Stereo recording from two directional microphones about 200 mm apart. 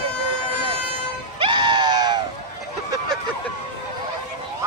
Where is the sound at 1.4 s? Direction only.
25° right (ahead or behind).